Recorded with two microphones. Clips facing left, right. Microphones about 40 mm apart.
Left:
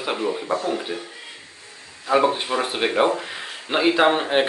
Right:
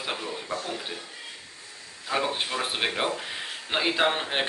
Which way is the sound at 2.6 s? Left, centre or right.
Centre.